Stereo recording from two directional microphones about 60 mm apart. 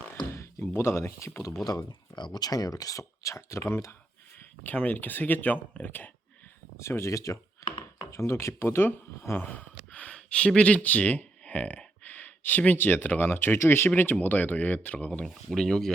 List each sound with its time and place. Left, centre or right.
0.1 s speech: left
2.4 s speech: left
4.6 s speech: left
6.7 s speech: left
7.6 s a sound: left
8.1 s speech: left
9.2 s a sound: left; by 10.8 s centre
10.8 s speech: left
15.4 s speech: centre